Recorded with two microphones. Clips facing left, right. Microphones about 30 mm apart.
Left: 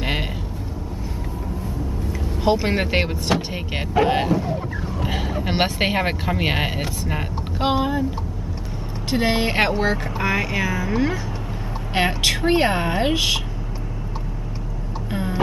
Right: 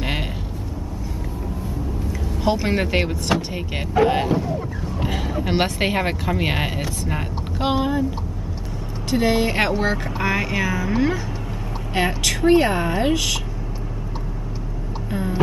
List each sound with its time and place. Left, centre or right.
0.0 s a sound: centre
2.4 s speech: centre
4.5 s vehicle: centre
5.1 s speech: centre
9.1 s a woman's voice: left
9.7 s speech: centre
11.9 s a woman's voice: left
15.0 s a sound: left